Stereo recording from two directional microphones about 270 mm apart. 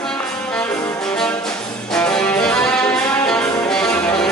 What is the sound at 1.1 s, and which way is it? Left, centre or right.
Music, centre.